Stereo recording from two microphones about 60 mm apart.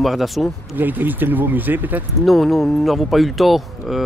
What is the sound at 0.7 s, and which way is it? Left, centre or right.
Speech, right.